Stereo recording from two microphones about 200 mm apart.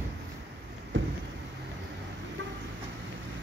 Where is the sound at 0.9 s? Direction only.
70° right (ahead or behind).